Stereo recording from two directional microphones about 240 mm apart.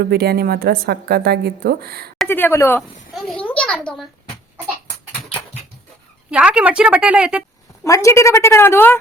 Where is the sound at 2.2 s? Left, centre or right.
Centre.